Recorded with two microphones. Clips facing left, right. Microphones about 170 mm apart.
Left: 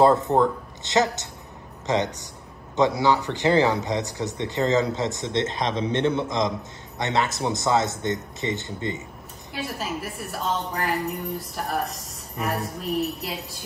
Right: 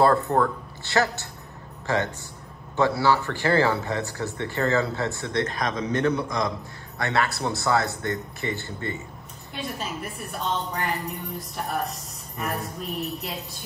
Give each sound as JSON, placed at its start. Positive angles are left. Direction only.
{"t": 0.0, "sound": "a man's voice", "side_deg": 20}
{"t": 9.5, "sound": "a woman's voice", "side_deg": 5}